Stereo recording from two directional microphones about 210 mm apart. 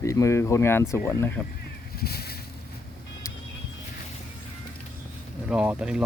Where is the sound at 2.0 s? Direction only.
50° left (ahead or behind).